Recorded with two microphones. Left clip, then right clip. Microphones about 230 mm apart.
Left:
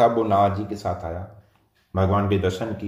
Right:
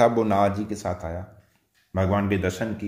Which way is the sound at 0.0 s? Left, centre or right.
Right.